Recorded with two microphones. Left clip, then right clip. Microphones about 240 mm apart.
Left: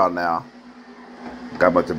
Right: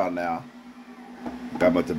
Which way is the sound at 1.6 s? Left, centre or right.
Centre.